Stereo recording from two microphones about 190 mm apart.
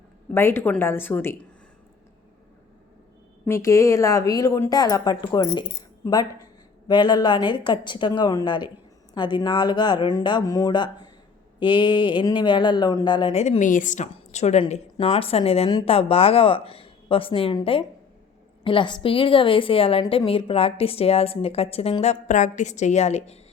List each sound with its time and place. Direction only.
0.3 s a woman's voice: 10° left (ahead or behind)
3.4 s a woman's voice: 15° left (ahead or behind)
6.8 s speech: 25° left (ahead or behind)
14.6 s a woman's voice: 25° left (ahead or behind)